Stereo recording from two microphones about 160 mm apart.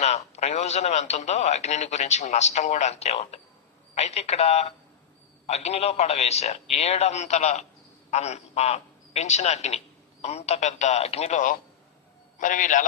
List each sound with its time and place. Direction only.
0.0 s a man's voice: 45° left (ahead or behind)